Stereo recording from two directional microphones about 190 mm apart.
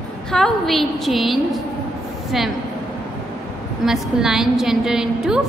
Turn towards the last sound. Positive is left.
turn(degrees=-5)  # may be behind; listen again after turning